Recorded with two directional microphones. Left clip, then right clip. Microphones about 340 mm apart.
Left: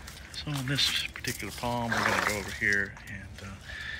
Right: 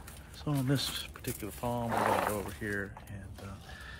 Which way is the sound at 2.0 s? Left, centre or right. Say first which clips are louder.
Left 2 dB; centre.